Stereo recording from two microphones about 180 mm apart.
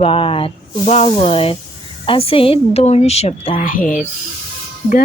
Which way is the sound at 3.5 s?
50° left (ahead or behind).